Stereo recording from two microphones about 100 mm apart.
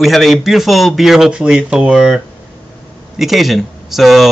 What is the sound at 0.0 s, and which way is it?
A man's voice, centre (ahead or behind).